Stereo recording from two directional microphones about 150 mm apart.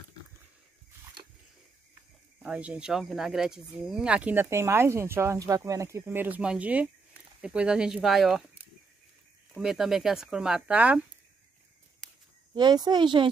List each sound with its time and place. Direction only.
2.4 s speech: 10° right (ahead or behind)
9.6 s speech: 5° right (ahead or behind)
12.5 s speech: 30° right (ahead or behind)